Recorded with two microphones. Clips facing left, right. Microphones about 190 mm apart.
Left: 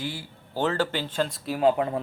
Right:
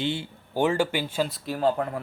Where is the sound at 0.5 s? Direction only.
10° right (ahead or behind).